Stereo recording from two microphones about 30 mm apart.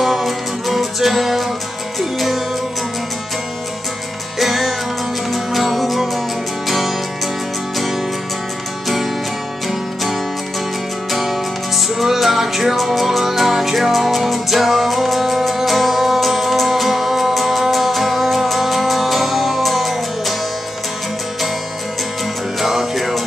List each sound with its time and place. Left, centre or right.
0.0 s music: centre
4.4 s music: centre
11.1 s music: centre
22.6 s music: centre